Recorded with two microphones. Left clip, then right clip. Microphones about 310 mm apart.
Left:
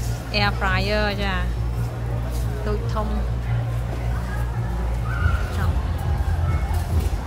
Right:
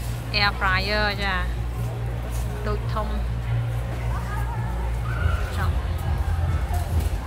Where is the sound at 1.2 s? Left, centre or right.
Centre.